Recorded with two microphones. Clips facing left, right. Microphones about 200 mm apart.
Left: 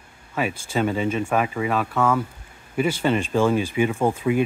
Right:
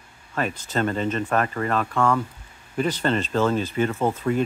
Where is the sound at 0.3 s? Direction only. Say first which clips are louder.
Left 1 dB; 10° left (ahead or behind).